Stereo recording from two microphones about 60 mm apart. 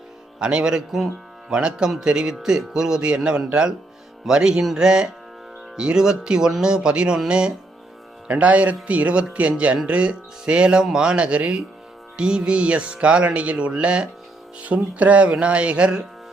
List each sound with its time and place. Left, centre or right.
0.3 s a man's voice: centre